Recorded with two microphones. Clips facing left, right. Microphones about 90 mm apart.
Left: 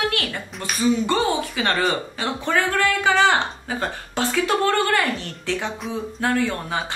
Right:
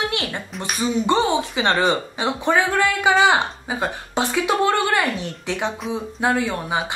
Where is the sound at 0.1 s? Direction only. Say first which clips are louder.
Right 1 dB; 20° right (ahead or behind).